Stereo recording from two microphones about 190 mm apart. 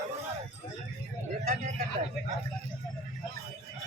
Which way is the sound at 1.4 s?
40° right (ahead or behind).